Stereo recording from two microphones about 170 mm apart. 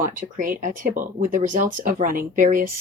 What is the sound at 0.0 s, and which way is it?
Speech, 50° right (ahead or behind).